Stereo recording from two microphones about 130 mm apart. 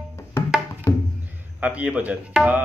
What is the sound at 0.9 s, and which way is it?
Music, 25° left (ahead or behind).